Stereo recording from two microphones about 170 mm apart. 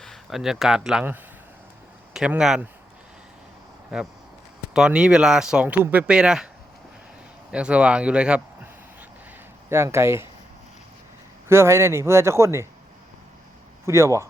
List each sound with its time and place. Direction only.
0.0 s speech: centre (ahead or behind)
4.7 s speech: 5° right (ahead or behind)
7.5 s a man's voice: 5° right (ahead or behind)
11.4 s speech: 15° right (ahead or behind)
13.8 s speech: 15° right (ahead or behind)